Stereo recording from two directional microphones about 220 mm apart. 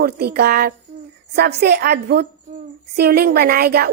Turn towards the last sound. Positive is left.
turn(degrees=-45)  # may be behind; listen again after turning